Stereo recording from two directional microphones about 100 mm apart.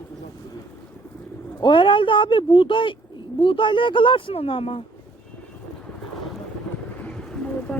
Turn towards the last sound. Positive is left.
turn(degrees=10)  # may be behind; listen again after turning